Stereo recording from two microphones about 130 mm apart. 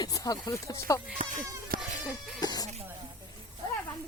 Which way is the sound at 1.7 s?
90° right.